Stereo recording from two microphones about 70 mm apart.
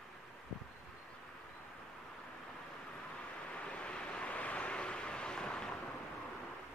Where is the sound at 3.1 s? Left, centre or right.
Centre.